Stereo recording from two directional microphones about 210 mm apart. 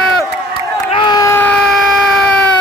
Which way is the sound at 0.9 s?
20° left (ahead or behind).